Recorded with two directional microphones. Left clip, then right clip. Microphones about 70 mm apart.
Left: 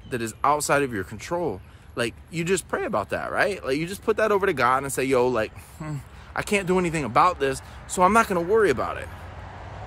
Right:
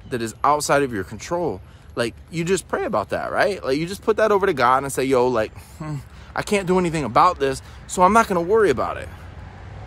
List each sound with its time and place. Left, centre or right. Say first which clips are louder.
0.1 s speech: right 3 dB; right